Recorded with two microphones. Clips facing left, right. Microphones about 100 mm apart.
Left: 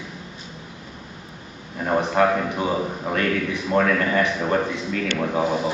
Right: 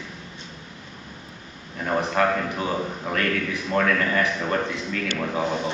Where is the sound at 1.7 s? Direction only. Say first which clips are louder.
Left 3 dB; 10° left (ahead or behind).